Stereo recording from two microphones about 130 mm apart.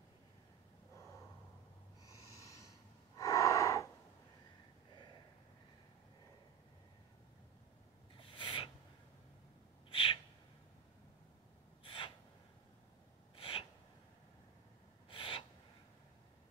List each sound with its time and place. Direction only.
2.0 s owl: 25° left (ahead or behind)
3.2 s gasp: 25° left (ahead or behind)
8.2 s rub: 40° left (ahead or behind)
9.8 s gasp: 45° left (ahead or behind)
11.8 s gasp: 40° left (ahead or behind)
13.4 s a sound: 45° left (ahead or behind)
15.0 s gasp: 40° left (ahead or behind)